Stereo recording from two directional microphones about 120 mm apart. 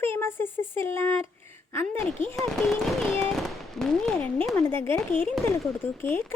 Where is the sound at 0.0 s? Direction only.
20° left (ahead or behind).